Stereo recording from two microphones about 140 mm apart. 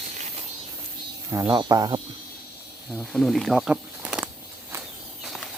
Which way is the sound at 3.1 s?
Centre (ahead or behind).